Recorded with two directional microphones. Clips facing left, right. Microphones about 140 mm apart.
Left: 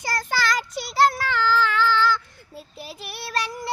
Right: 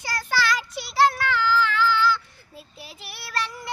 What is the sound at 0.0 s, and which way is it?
Child singing, 45° left (ahead or behind).